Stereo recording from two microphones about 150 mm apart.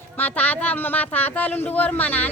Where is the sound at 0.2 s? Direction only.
10° left (ahead or behind).